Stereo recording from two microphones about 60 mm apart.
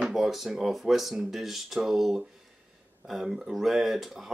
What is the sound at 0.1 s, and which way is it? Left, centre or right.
Speech, centre.